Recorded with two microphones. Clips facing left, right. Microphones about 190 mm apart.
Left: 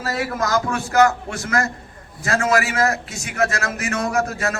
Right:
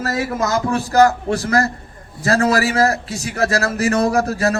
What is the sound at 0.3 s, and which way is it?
A man's voice, 25° right (ahead or behind).